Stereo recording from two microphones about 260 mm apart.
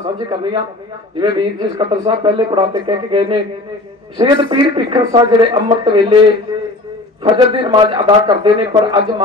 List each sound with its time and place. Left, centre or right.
0.0 s a man's voice: centre
7.5 s speech: centre